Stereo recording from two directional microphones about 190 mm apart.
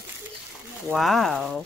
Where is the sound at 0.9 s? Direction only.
Centre (ahead or behind).